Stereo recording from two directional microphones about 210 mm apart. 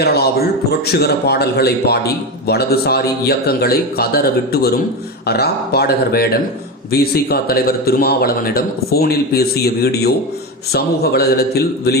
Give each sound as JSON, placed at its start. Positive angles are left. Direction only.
{"t": 0.0, "sound": "a man's voice", "side_deg": 50}